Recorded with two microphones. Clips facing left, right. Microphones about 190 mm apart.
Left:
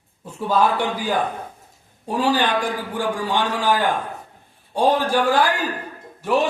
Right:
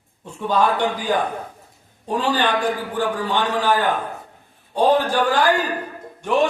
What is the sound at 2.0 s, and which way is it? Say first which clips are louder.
A man's voice: left 1 dB; 10° left (ahead or behind).